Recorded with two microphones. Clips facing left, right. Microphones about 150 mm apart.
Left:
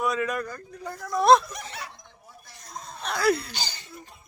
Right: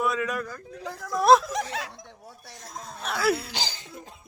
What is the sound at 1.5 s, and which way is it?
Snicker, 90° right.